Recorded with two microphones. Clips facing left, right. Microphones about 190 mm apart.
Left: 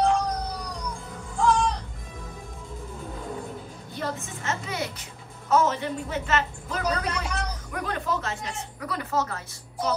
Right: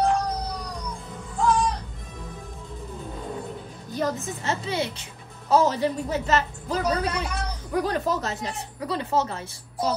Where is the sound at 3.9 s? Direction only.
35° right (ahead or behind).